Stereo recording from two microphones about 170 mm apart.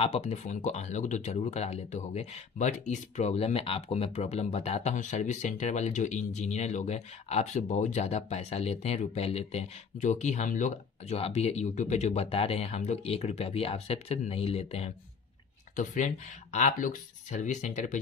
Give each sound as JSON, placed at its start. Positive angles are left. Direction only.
{"t": 0.0, "sound": "speech", "side_deg": 40}
{"t": 15.7, "sound": "speech", "side_deg": 50}